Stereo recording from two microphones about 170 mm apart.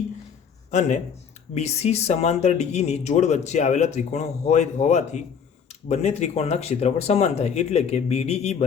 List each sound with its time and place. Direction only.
0.7 s speech: 45° left (ahead or behind)